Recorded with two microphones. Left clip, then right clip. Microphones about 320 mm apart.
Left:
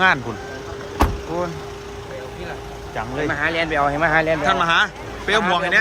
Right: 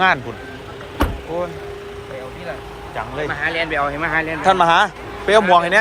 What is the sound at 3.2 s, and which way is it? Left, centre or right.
Speech, left.